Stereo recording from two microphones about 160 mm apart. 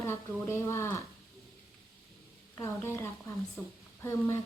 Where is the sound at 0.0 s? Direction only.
15° left (ahead or behind).